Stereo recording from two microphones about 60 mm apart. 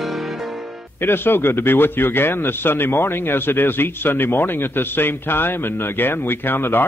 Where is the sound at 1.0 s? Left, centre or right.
Left.